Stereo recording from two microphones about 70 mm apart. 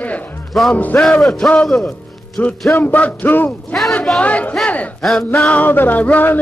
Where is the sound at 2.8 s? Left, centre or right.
Left.